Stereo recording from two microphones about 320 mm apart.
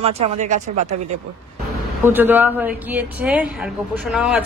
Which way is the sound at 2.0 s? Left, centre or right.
Centre.